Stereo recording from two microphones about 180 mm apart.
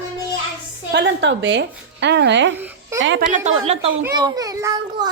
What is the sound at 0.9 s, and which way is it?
A woman's voice, 75° right (ahead or behind).